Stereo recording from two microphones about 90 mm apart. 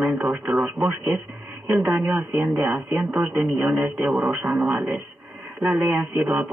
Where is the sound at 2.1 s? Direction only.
15° right (ahead or behind).